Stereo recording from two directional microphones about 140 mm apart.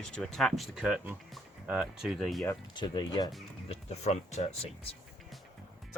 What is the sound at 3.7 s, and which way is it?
Speech, 55° left (ahead or behind).